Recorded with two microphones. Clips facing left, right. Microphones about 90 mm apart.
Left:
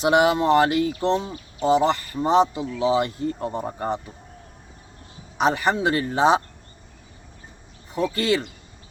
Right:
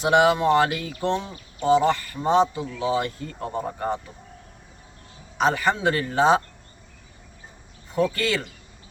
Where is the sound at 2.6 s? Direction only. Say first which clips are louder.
Left 3 dB; 20° left (ahead or behind).